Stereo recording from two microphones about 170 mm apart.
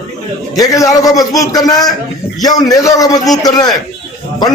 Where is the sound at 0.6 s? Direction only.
20° left (ahead or behind).